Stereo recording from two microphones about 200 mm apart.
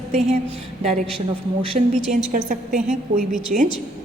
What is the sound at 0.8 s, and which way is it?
Speech, 35° right (ahead or behind).